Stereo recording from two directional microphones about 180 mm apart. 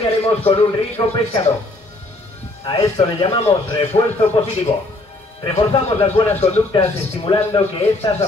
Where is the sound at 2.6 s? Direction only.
30° left (ahead or behind).